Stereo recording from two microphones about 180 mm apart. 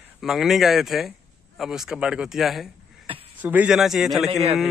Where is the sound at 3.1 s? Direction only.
30° right (ahead or behind).